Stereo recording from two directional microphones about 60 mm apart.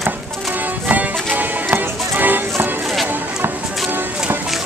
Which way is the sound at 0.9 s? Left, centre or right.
Right.